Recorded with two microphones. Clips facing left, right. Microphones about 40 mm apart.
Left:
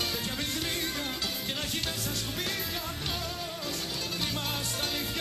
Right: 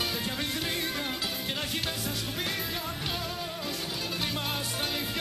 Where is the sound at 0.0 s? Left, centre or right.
Centre.